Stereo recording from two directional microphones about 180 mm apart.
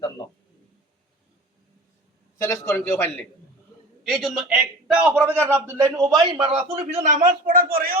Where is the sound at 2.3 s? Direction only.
15° left (ahead or behind).